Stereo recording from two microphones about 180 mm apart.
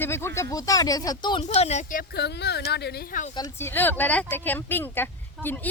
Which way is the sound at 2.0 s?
65° left (ahead or behind).